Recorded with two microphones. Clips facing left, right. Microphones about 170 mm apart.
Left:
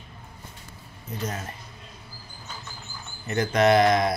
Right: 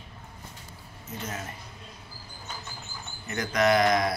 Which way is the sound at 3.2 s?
30° left (ahead or behind).